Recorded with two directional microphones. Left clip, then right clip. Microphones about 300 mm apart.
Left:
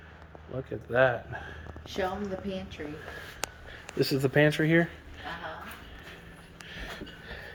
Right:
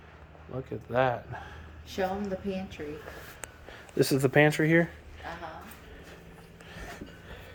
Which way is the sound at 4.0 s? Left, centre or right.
Centre.